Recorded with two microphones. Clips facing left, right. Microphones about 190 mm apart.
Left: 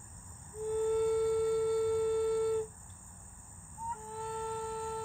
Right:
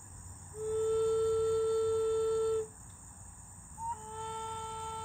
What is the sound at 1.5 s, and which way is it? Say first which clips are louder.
Music: even; 25° right (ahead or behind).